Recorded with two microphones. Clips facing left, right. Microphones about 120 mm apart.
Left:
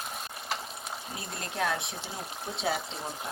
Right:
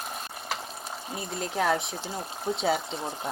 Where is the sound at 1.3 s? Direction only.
5° right (ahead or behind).